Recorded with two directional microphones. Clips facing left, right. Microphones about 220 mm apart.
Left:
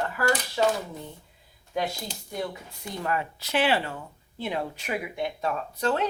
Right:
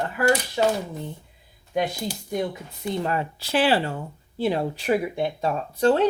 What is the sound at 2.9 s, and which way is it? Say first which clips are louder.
Speech: right 4 dB; 30° right (ahead or behind).